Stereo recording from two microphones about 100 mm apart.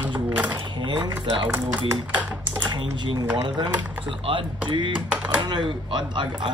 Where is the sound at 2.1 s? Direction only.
15° right (ahead or behind).